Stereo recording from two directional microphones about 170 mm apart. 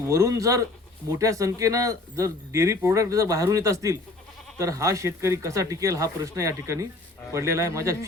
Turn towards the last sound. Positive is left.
turn(degrees=-15)  # may be behind; listen again after turning